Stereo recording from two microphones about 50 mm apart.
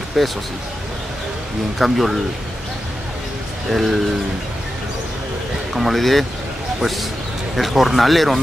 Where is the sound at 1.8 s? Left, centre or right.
Centre.